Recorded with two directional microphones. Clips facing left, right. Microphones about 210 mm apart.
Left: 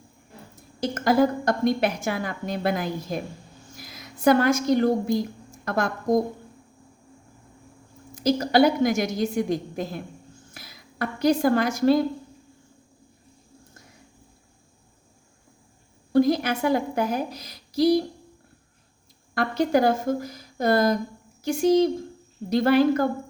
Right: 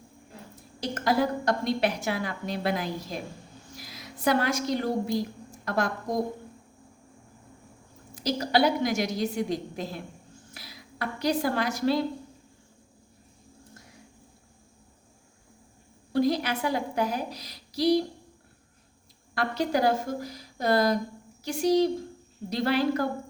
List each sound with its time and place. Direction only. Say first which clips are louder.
0.8 s a woman's voice: left 5 dB; 45° left (ahead or behind)
8.1 s a woman's voice: left 5 dB; 50° left (ahead or behind)
16.1 s a woman's voice: left 5 dB; 50° left (ahead or behind)
19.3 s a woman's voice: left 5 dB; 50° left (ahead or behind)